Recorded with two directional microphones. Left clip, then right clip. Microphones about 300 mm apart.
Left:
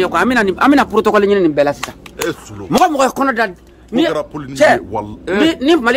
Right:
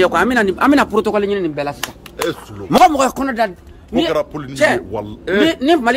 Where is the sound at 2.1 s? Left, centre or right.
Centre.